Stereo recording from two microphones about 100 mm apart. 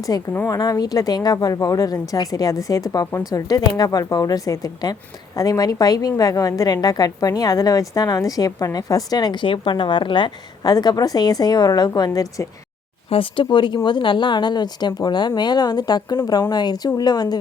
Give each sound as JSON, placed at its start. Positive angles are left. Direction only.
{"t": 0.1, "sound": "a woman's voice", "side_deg": 40}
{"t": 13.1, "sound": "speech", "side_deg": 60}